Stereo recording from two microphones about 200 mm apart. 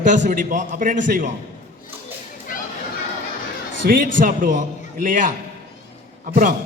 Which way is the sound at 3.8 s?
40° right (ahead or behind).